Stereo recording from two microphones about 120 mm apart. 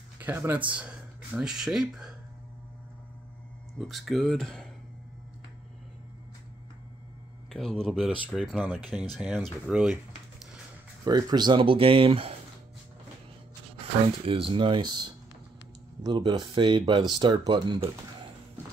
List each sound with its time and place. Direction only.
0.2 s speech: 15° right (ahead or behind)
3.7 s speech: centre (ahead or behind)
7.5 s speech: 5° left (ahead or behind)
11.1 s speech: 35° right (ahead or behind); by 12.4 s 50° right (ahead or behind)
14.0 s speech: 50° right (ahead or behind)